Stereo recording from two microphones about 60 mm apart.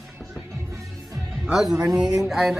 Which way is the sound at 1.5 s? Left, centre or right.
Centre.